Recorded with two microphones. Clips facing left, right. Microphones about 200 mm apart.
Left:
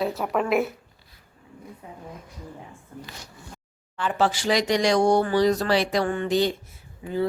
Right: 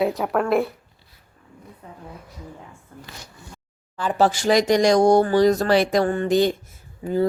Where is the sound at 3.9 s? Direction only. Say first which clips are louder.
Right 4 dB; 40° right (ahead or behind).